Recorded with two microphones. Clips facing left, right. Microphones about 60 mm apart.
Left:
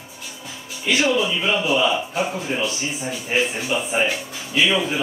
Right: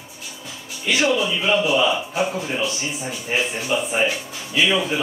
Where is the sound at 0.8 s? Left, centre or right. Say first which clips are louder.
Even; centre.